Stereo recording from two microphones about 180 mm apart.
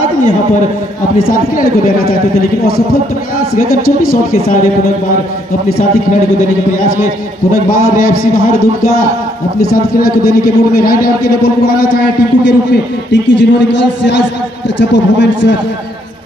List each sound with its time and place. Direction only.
1.1 s a man's voice: 50° left (ahead or behind)
7.7 s a man's voice: 50° left (ahead or behind)
13.1 s a man's voice: 80° left